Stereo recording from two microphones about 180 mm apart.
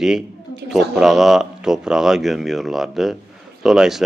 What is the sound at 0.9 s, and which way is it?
Speech, centre (ahead or behind).